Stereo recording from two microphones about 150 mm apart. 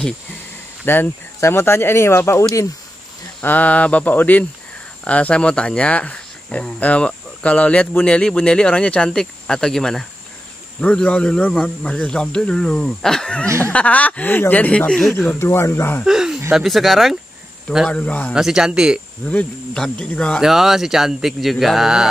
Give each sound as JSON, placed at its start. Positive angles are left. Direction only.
{"t": 0.8, "sound": "speech", "side_deg": 15}
{"t": 15.1, "sound": "speech", "side_deg": 15}
{"t": 16.0, "sound": "speech", "side_deg": -5}
{"t": 18.3, "sound": "speech", "side_deg": -5}
{"t": 19.2, "sound": "speech", "side_deg": 5}